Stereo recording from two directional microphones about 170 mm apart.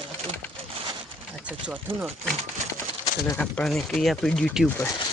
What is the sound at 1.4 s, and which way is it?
Speech, 10° right (ahead or behind).